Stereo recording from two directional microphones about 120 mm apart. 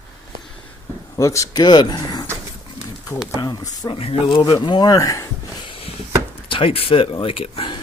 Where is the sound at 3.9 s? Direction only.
55° left (ahead or behind).